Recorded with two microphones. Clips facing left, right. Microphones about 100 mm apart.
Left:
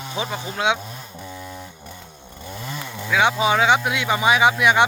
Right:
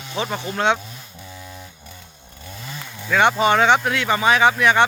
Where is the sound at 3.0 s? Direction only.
5° left (ahead or behind).